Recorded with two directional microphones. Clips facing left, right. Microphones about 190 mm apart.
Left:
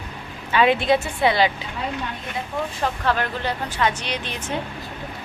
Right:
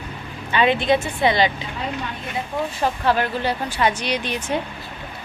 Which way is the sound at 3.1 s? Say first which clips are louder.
Right 4 dB; 10° right (ahead or behind).